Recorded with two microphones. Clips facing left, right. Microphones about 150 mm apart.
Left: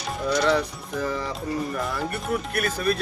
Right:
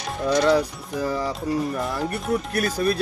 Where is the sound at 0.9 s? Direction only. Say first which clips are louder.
Right 3 dB; 35° right (ahead or behind).